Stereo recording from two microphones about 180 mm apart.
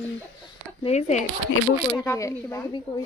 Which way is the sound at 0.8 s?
40° left (ahead or behind).